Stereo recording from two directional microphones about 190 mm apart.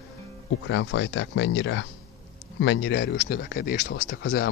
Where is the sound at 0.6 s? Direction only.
75° left (ahead or behind).